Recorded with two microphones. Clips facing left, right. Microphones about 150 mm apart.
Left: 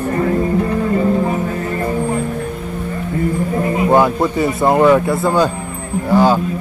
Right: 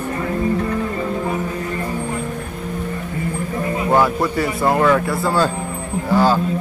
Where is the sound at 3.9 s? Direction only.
20° left (ahead or behind).